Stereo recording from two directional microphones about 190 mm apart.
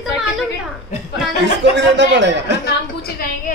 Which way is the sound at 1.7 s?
65° right (ahead or behind).